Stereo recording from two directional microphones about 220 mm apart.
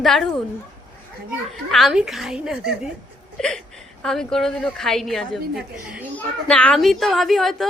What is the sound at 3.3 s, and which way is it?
Whimper, 5° left (ahead or behind).